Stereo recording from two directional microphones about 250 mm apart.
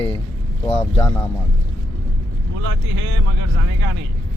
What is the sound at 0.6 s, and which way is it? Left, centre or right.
Speech, left.